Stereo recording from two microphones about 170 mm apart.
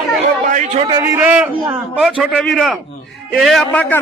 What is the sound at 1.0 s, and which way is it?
A man's voice, 10° right (ahead or behind).